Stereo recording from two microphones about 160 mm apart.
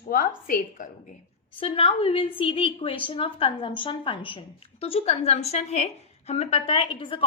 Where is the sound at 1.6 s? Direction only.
35° left (ahead or behind).